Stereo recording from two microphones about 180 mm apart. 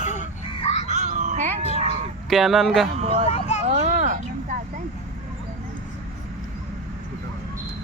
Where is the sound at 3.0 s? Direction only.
35° right (ahead or behind).